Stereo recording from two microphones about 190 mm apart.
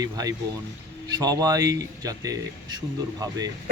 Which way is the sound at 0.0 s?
20° right (ahead or behind).